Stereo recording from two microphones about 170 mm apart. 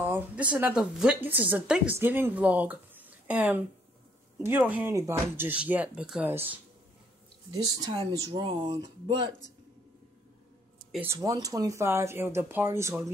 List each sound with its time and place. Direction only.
0.0 s speech: 10° right (ahead or behind)
7.6 s speech: 25° right (ahead or behind)
11.1 s speech: 20° right (ahead or behind)